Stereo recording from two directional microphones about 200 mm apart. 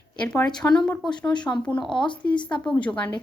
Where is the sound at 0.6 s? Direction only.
5° left (ahead or behind).